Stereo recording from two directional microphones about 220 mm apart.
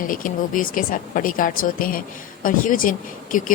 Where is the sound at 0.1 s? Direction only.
40° left (ahead or behind).